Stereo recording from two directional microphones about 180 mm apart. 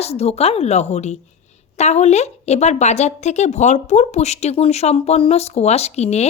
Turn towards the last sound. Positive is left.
turn(degrees=35)  # may be behind; listen again after turning